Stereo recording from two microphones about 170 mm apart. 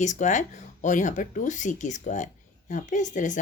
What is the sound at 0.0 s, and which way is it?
Speech, 45° left (ahead or behind).